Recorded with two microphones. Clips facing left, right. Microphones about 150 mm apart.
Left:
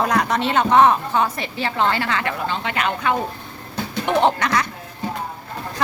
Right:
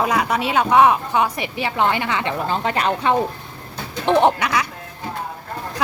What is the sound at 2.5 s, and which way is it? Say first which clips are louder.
Speech: right 3 dB; 35° right (ahead or behind).